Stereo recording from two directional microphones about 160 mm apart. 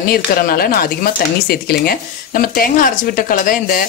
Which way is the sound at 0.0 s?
65° left (ahead or behind).